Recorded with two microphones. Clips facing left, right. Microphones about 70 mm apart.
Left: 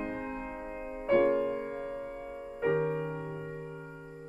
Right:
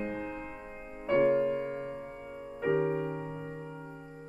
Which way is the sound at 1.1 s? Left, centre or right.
Centre.